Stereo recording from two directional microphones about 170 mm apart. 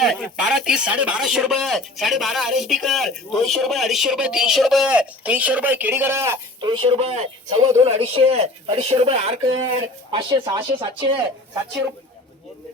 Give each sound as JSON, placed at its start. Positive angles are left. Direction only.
{"t": 0.0, "sound": "speech", "side_deg": 0}
{"t": 6.6, "sound": "speech", "side_deg": -30}